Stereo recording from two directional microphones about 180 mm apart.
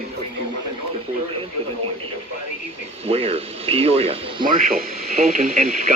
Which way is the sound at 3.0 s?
35° right (ahead or behind).